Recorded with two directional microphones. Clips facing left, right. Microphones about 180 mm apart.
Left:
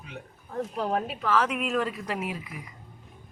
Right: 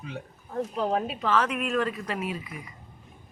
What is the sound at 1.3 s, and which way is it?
Speech, 10° left (ahead or behind).